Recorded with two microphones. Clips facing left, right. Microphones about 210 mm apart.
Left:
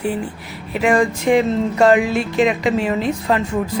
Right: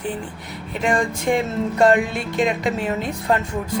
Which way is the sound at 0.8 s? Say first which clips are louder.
Left 5 dB; centre (ahead or behind).